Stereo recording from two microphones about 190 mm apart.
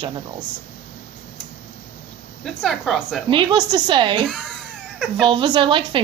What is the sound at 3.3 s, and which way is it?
Speech, 25° right (ahead or behind).